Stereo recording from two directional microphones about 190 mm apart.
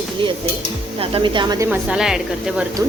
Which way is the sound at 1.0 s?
25° right (ahead or behind).